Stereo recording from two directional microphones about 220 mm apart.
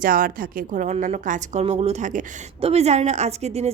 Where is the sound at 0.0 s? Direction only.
40° right (ahead or behind).